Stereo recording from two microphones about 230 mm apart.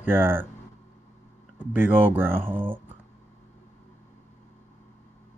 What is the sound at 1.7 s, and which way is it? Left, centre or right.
Speech, centre.